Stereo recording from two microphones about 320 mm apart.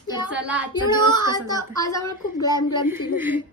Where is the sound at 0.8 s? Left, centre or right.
Centre.